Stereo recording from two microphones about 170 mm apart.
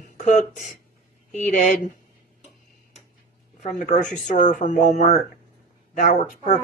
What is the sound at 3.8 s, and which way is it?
Speech, 50° left (ahead or behind).